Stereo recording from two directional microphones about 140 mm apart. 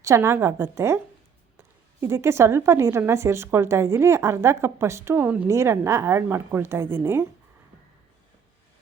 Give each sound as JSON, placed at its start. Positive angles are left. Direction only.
{"t": 0.0, "sound": "a woman's voice", "side_deg": -20}